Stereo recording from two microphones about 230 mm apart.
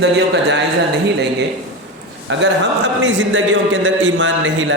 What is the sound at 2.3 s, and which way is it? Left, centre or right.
A man's voice, right.